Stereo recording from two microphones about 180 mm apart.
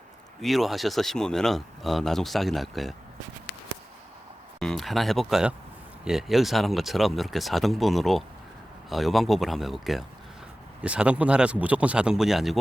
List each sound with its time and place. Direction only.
0.4 s speech: centre (ahead or behind)
4.6 s speech: centre (ahead or behind)